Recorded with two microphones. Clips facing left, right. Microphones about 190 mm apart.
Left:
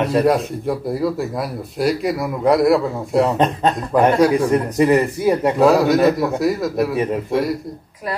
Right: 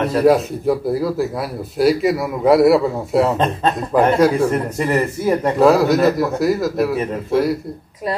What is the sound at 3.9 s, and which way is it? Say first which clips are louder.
Speech: even; centre (ahead or behind).